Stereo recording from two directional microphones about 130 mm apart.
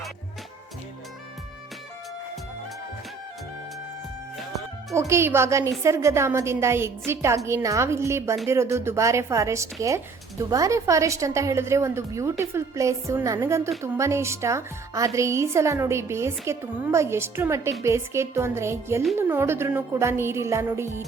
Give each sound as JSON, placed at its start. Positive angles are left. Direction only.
{"t": 4.4, "sound": "music", "side_deg": 0}
{"t": 4.9, "sound": "a woman's voice", "side_deg": -20}